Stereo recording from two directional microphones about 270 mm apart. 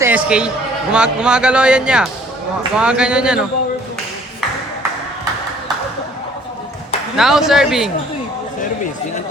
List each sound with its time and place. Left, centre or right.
0.0 s a man's voice: centre
7.2 s a man's voice: centre